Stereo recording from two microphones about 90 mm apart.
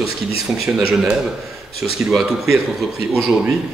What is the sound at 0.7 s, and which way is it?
Speech, 15° right (ahead or behind).